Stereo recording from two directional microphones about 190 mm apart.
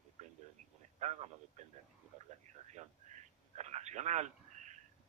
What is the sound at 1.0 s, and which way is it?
A man's voice, 35° right (ahead or behind).